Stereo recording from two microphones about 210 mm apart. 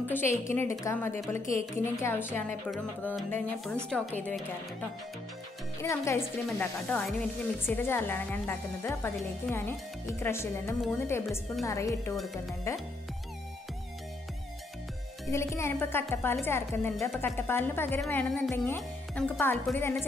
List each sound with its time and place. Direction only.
0.1 s a woman's voice: 10° left (ahead or behind)
5.8 s speech: 15° left (ahead or behind)
15.3 s speech: 15° left (ahead or behind)